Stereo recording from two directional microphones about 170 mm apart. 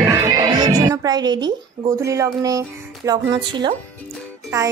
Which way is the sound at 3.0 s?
25° right (ahead or behind).